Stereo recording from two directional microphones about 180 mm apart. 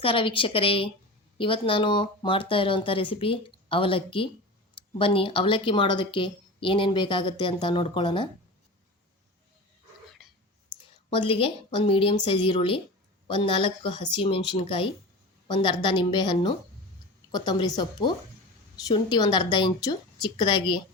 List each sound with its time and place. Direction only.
0.0 s speech: 30° left (ahead or behind)
11.1 s speech: 30° left (ahead or behind)